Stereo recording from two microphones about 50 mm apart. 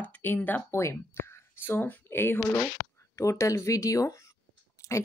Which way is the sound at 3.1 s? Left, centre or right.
Left.